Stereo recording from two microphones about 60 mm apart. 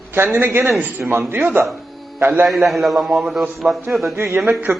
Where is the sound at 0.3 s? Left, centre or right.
Right.